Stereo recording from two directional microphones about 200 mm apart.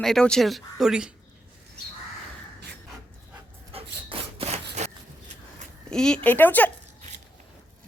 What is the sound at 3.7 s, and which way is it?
Dog, 30° right (ahead or behind).